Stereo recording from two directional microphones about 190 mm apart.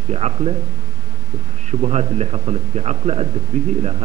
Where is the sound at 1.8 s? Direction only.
35° right (ahead or behind).